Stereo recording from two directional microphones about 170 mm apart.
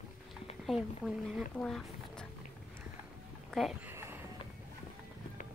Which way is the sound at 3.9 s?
15° right (ahead or behind).